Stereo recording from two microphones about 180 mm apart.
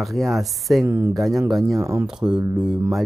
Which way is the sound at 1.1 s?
Centre (ahead or behind).